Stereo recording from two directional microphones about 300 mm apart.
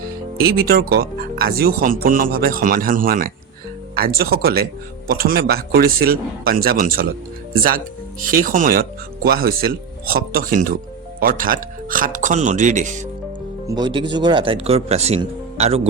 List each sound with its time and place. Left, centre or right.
0.5 s a man's voice: right
8.2 s speech: right
13.7 s speech: centre